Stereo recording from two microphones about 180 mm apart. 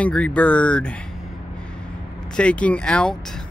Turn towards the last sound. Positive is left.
turn(degrees=5)  # may be behind; listen again after turning